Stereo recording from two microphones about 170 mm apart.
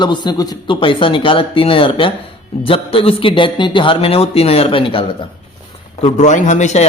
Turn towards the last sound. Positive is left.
turn(degrees=45)  # may be behind; listen again after turning